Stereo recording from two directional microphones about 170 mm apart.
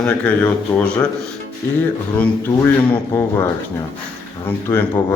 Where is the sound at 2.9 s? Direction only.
15° left (ahead or behind).